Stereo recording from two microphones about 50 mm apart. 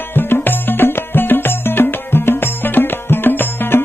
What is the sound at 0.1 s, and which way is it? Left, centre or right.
Music, left.